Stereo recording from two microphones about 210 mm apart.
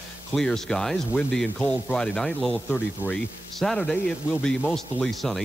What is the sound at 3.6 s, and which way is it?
Speech, centre (ahead or behind).